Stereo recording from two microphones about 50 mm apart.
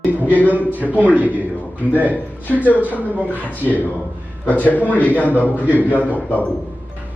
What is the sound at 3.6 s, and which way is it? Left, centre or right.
Speech, right.